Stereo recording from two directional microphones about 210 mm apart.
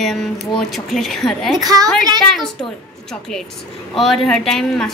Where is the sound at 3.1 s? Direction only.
Centre (ahead or behind).